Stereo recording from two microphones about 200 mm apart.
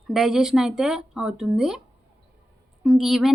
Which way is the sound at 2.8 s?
Centre (ahead or behind).